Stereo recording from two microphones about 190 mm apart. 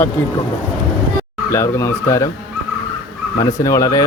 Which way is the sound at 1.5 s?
15° left (ahead or behind).